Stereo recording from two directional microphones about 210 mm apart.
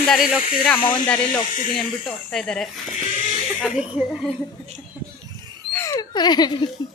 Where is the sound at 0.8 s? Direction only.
20° left (ahead or behind).